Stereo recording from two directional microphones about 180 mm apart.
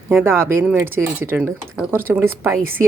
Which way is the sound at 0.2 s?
15° right (ahead or behind).